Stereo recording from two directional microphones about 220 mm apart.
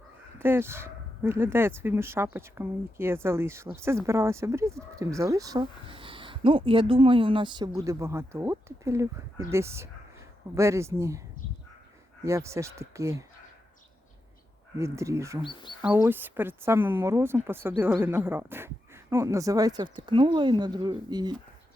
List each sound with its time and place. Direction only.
0.3 s speech: 10° right (ahead or behind)
12.2 s speech: 15° right (ahead or behind)
14.8 s speech: 15° right (ahead or behind)